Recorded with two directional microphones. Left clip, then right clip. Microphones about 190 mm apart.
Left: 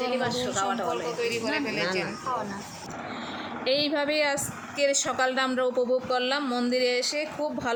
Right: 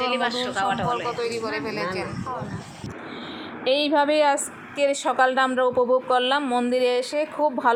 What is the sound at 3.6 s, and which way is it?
A woman's voice, 10° right (ahead or behind).